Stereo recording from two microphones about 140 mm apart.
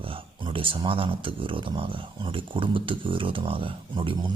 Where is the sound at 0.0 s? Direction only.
40° right (ahead or behind).